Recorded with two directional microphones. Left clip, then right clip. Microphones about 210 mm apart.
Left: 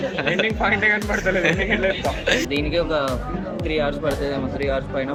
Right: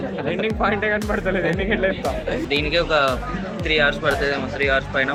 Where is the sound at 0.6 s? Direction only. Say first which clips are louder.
Even; 25° right (ahead or behind).